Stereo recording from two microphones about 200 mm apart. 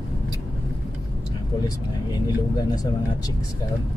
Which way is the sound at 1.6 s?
20° left (ahead or behind).